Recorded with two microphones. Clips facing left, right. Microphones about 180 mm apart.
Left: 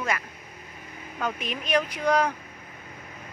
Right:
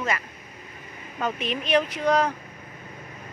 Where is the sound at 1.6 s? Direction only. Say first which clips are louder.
Right 2 dB; 25° right (ahead or behind).